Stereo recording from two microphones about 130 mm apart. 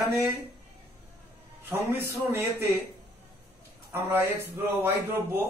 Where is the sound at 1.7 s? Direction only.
15° right (ahead or behind).